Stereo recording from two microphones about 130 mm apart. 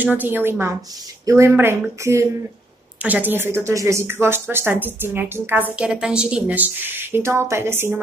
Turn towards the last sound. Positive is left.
turn(degrees=-20)  # may be behind; listen again after turning